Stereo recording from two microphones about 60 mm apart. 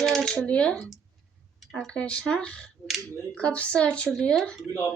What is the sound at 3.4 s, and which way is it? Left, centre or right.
Speech, centre.